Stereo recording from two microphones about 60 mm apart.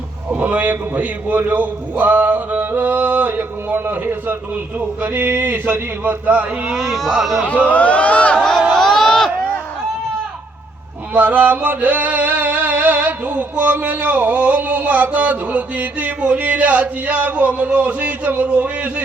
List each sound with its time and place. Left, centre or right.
0.3 s music: right
4.8 s a man's voice: right
6.7 s speech: centre
7.4 s speech: left
8.7 s a sound: centre
11.1 s music: right